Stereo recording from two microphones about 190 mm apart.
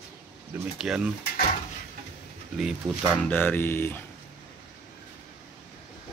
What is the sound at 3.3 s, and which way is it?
Speech, 10° left (ahead or behind).